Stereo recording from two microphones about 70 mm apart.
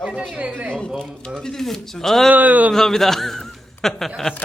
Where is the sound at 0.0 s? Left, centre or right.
Centre.